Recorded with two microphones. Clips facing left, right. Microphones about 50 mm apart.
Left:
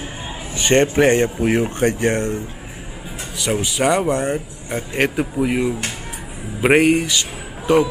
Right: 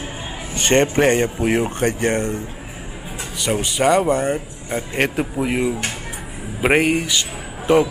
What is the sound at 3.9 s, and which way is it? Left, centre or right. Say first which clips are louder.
Speech: right 2 dB; centre.